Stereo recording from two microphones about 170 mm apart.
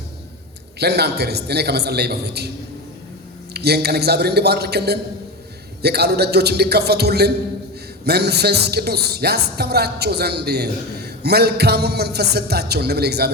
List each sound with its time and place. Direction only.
0.8 s speech: 75° right (ahead or behind)
3.5 s speech: 70° right (ahead or behind)